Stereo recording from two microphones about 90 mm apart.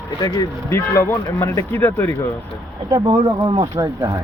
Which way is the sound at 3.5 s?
55° right (ahead or behind).